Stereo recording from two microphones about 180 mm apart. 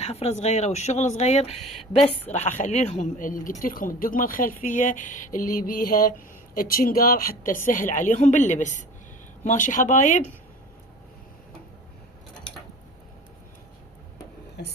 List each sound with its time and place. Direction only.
0.0 s a woman's voice: 35° left (ahead or behind)
14.6 s a woman's voice: 65° left (ahead or behind)